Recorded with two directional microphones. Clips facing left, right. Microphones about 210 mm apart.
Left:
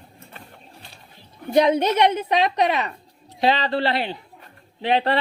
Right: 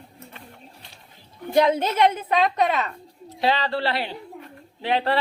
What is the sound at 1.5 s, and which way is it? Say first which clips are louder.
Speech: left 2 dB; 20° left (ahead or behind).